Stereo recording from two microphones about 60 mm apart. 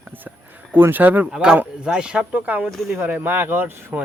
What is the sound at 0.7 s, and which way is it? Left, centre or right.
Speech, right.